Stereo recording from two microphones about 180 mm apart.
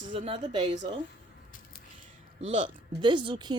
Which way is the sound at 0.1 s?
30° right (ahead or behind).